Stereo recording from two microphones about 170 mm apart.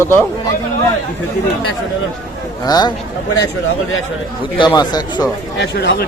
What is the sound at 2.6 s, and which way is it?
Speech, 25° left (ahead or behind).